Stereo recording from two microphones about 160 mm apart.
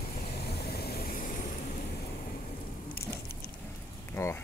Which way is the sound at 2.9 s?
80° left.